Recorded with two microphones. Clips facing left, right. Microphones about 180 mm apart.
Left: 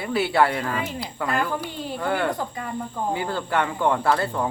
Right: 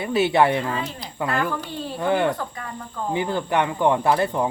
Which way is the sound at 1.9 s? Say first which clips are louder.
Right 4 dB; 20° right (ahead or behind).